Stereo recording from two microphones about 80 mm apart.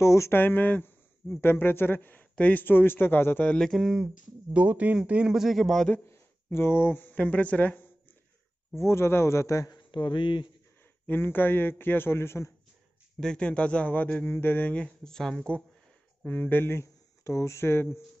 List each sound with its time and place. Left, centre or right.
0.0 s speech: left
3.4 s speech: centre
3.7 s speech: centre
4.6 s speech: centre
5.3 s speech: centre
6.0 s speech: left
8.7 s a man's voice: left
9.7 s speech: left
11.1 s speech: left
13.2 s speech: centre
16.3 s speech: left
16.8 s speech: left